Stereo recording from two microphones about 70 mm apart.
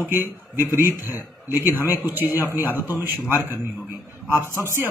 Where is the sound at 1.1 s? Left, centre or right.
Right.